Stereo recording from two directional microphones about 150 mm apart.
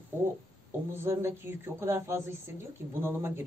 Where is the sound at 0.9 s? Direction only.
15° right (ahead or behind).